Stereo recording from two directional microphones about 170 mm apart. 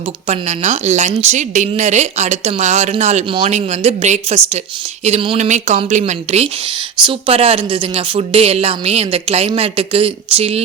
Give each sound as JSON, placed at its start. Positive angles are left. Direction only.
{"t": 0.3, "sound": "a woman's voice", "side_deg": -40}